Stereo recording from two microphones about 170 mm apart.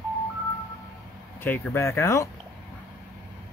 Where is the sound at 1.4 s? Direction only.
10° left (ahead or behind).